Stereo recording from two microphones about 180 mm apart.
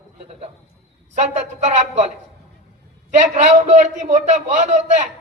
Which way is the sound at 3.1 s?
40° right (ahead or behind).